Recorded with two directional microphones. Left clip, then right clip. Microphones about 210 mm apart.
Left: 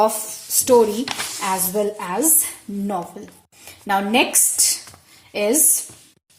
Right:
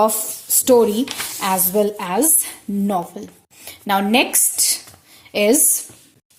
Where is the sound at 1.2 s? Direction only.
40° right (ahead or behind).